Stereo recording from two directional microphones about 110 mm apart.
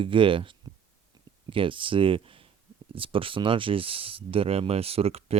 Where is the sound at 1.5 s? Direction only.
50° right (ahead or behind).